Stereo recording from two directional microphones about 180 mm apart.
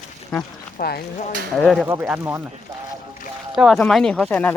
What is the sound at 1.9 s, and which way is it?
Speech, 10° right (ahead or behind).